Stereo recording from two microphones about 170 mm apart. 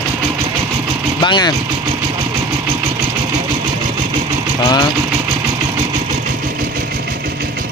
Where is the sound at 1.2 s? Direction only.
25° left (ahead or behind).